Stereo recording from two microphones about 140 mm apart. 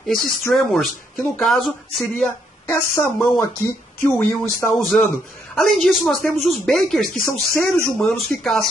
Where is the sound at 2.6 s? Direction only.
20° left (ahead or behind).